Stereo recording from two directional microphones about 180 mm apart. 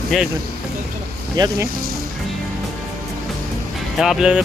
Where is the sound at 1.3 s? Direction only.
20° right (ahead or behind).